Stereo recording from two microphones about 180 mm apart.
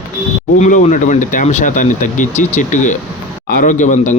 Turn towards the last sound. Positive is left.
turn(degrees=45)  # may be behind; listen again after turning